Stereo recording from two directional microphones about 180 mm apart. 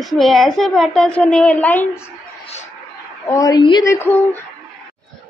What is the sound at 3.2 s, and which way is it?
A woman's voice, 20° left (ahead or behind).